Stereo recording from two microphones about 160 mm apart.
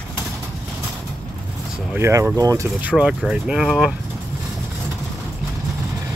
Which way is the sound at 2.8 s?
5° right (ahead or behind).